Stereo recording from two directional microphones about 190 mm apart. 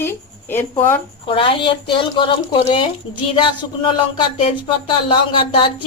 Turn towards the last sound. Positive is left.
turn(degrees=25)  # may be behind; listen again after turning